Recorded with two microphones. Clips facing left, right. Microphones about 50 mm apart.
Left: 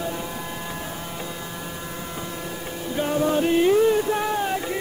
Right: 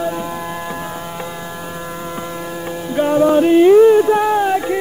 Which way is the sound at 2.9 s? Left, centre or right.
Right.